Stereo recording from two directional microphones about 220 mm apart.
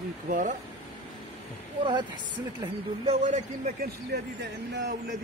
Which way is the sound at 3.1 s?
35° right (ahead or behind).